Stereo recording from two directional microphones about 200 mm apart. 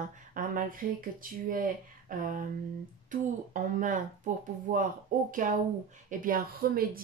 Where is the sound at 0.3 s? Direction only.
45° right (ahead or behind).